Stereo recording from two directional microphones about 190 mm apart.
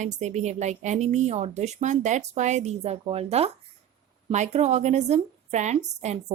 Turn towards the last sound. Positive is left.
turn(degrees=-35)  # may be behind; listen again after turning